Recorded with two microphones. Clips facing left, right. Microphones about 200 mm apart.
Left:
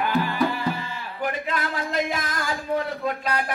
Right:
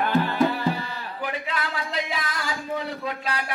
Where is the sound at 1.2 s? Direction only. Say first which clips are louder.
Left 3 dB; 45° left (ahead or behind).